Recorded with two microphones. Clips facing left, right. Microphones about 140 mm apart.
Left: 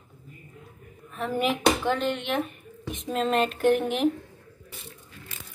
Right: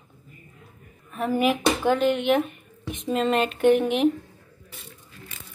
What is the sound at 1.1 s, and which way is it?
Speech, 5° right (ahead or behind).